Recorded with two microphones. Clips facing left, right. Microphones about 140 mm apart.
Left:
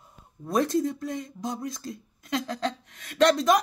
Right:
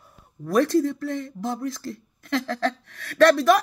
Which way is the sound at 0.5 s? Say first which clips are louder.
Right 4 dB; 20° left (ahead or behind).